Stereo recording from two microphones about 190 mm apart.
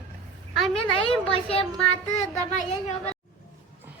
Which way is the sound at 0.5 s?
Centre (ahead or behind).